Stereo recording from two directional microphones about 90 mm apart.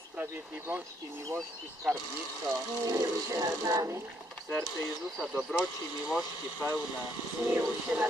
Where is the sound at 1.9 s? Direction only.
5° right (ahead or behind).